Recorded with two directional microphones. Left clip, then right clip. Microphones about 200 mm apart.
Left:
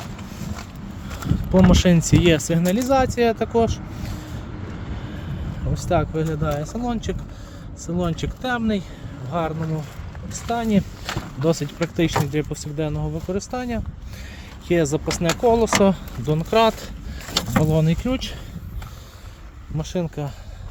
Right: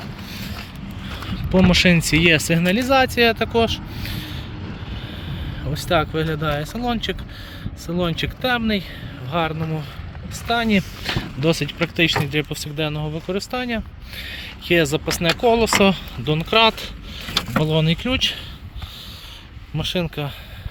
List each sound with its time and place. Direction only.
1.1 s speech: 10° left (ahead or behind)
5.7 s speech: centre (ahead or behind)
9.3 s speech: 5° right (ahead or behind)
10.5 s speech: 20° right (ahead or behind)
11.3 s speech: 5° left (ahead or behind)
19.7 s speech: centre (ahead or behind)